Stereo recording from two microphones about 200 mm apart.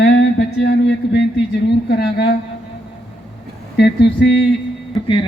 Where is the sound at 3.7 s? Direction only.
60° left (ahead or behind).